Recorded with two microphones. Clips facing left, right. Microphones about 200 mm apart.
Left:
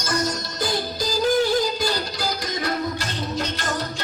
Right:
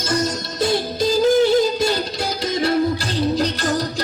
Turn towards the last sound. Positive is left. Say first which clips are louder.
# right 6 dB
turn(degrees=-35)  # may be behind; listen again after turning